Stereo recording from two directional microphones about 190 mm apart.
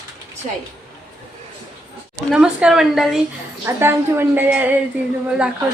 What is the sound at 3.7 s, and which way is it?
A woman's voice, 10° right (ahead or behind).